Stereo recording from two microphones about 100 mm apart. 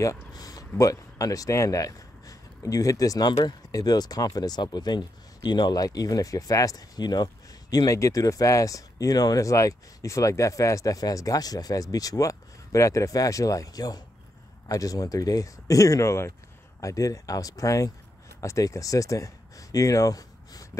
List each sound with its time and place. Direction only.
0.0 s speech: 35° left (ahead or behind)